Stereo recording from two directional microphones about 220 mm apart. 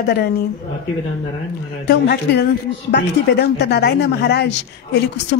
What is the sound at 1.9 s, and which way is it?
A woman's voice, 50° left (ahead or behind).